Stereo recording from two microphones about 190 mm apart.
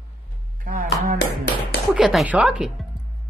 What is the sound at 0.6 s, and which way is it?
Speech, 45° right (ahead or behind).